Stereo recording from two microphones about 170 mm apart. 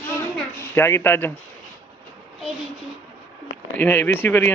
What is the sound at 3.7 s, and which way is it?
Speech, 10° left (ahead or behind).